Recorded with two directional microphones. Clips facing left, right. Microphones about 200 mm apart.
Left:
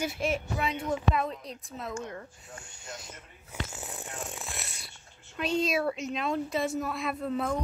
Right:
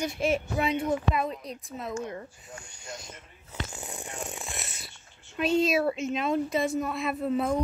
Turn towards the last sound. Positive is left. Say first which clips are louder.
# right 3 dB
turn(degrees=-5)  # may be behind; listen again after turning